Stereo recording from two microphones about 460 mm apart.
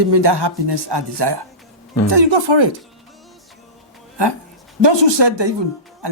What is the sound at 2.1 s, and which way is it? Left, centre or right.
Speech, right.